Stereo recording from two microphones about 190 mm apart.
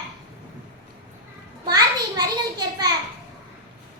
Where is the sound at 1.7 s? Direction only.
20° right (ahead or behind).